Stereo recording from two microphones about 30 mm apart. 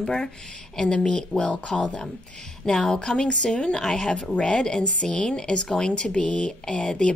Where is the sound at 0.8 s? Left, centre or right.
Left.